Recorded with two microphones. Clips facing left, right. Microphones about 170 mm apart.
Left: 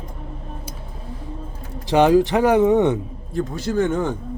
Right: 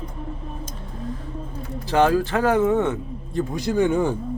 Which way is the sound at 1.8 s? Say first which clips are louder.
Left 4 dB; 15° left (ahead or behind).